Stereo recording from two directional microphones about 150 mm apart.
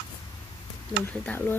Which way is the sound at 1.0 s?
15° left (ahead or behind).